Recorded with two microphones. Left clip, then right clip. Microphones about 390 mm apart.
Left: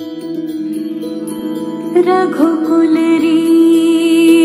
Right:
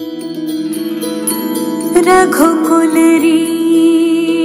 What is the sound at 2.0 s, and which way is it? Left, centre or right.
Music, right.